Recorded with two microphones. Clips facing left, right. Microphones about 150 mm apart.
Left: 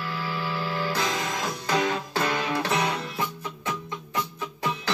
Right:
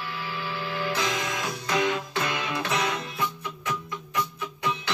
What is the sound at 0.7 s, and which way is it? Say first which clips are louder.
Music: right 1 dB; 35° left (ahead or behind).